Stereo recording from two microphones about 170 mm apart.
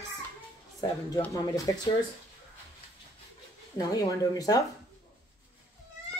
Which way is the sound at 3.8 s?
20° left (ahead or behind).